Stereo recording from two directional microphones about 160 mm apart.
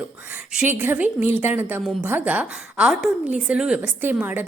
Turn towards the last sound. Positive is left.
turn(degrees=-10)  # may be behind; listen again after turning